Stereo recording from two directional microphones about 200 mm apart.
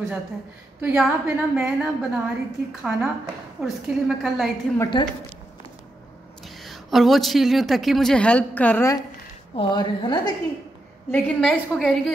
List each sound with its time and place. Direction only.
0.7 s speech: 5° right (ahead or behind)
4.9 s a woman's voice: 25° left (ahead or behind)
6.4 s a woman's voice: centre (ahead or behind); by 10.3 s 20° left (ahead or behind)
11.1 s speech: 5° left (ahead or behind)